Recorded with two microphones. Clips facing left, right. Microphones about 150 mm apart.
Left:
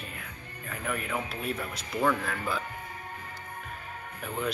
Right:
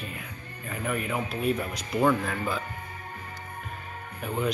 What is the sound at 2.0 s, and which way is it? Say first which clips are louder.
Speech: right 4 dB; 10° right (ahead or behind).